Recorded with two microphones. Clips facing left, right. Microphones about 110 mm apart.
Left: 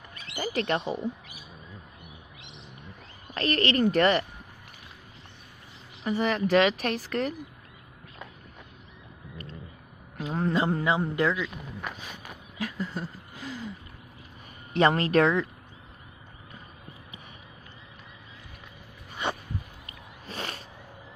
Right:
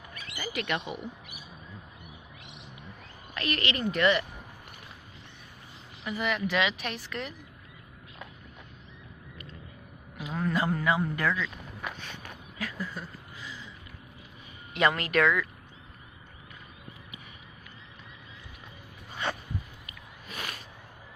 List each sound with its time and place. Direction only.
0.1 s speech: 30° left (ahead or behind)
3.3 s speech: 35° left (ahead or behind)
6.0 s speech: 35° left (ahead or behind)
10.2 s a man's voice: 30° left (ahead or behind)
12.0 s a sound: 10° left (ahead or behind)
12.5 s a sound: 20° left (ahead or behind)
13.4 s gasp: 40° left (ahead or behind)
14.7 s speech: 35° left (ahead or behind)
19.9 s a sound: 35° left (ahead or behind)